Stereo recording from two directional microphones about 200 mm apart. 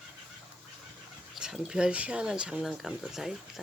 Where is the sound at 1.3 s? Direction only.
5° right (ahead or behind).